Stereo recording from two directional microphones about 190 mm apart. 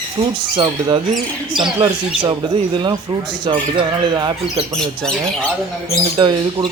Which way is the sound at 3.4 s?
25° right (ahead or behind).